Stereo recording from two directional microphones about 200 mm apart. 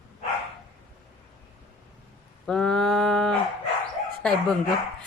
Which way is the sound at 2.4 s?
5° left (ahead or behind).